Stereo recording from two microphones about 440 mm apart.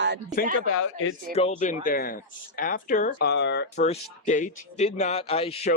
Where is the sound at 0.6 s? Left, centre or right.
Left.